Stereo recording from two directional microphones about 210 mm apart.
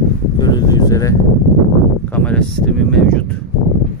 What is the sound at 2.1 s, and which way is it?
Speech, 5° left (ahead or behind).